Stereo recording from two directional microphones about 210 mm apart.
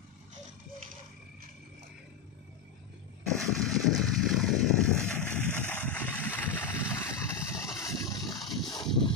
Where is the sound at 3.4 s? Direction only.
Centre (ahead or behind).